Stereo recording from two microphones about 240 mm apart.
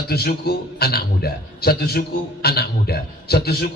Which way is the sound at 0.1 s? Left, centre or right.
Left.